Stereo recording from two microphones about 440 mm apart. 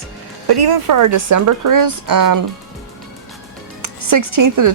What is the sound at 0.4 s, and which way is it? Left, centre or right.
Speech, right.